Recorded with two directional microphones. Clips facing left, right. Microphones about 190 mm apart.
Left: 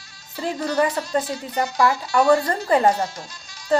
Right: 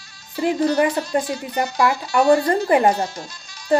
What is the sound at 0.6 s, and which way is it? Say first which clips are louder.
Speech: right 2 dB; 25° right (ahead or behind).